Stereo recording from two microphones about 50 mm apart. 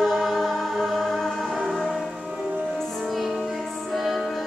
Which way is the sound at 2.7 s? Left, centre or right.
Centre.